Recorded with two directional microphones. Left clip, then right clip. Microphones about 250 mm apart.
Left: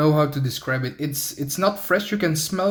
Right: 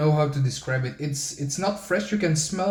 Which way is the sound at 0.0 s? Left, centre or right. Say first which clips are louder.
Left 4 dB; left.